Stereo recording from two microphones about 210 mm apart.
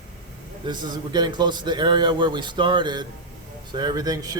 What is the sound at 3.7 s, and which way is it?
Mantra, 20° right (ahead or behind).